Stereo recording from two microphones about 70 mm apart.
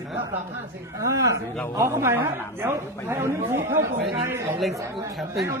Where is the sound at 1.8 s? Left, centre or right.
Right.